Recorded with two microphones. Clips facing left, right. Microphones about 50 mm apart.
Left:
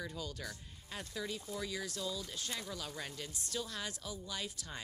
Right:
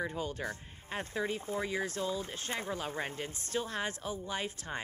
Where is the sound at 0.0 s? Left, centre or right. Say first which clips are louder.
Right 7 dB; right.